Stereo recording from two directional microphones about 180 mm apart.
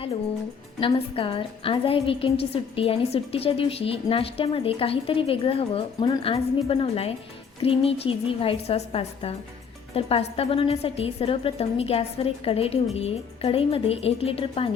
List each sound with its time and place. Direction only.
0.8 s a woman's voice: 30° left (ahead or behind)